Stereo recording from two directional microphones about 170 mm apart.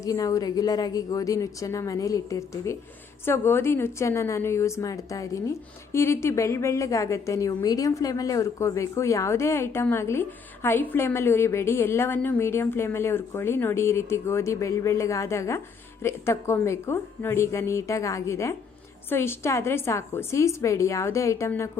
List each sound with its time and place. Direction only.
0.0 s a woman's voice: 20° left (ahead or behind)